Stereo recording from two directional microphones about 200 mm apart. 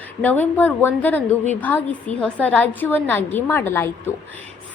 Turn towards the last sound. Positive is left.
turn(degrees=10)  # may be behind; listen again after turning